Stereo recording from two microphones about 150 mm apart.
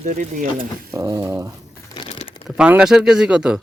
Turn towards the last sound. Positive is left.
turn(degrees=-5)  # may be behind; listen again after turning